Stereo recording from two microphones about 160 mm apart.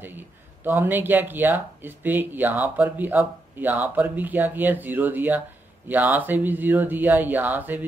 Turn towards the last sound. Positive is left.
turn(degrees=-10)  # may be behind; listen again after turning